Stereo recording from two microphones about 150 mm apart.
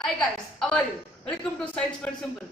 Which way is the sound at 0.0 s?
5° left (ahead or behind).